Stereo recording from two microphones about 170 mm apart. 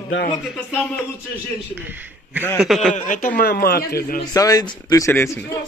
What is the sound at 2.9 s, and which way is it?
Speech, 50° left (ahead or behind).